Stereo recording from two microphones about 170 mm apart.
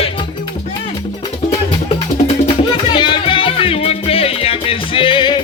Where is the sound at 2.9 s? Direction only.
30° left (ahead or behind).